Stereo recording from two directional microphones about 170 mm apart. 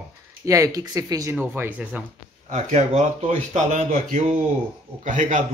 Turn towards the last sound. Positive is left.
turn(degrees=-50)  # may be behind; listen again after turning